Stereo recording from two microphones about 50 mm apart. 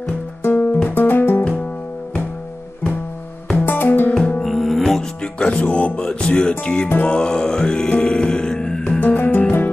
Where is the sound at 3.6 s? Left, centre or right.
Left.